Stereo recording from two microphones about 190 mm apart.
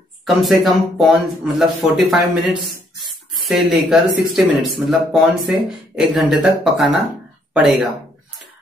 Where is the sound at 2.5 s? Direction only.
25° right (ahead or behind).